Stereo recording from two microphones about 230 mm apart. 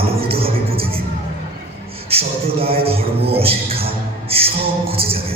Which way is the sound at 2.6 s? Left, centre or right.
Right.